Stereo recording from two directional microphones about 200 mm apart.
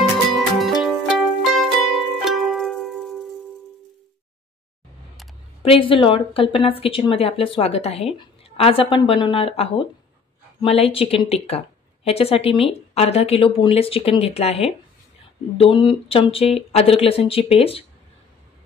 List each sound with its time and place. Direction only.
0.3 s music: centre (ahead or behind)
5.6 s speech: 25° left (ahead or behind)